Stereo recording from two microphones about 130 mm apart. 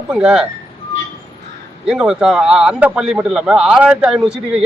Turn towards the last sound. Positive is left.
turn(degrees=-5)  # may be behind; listen again after turning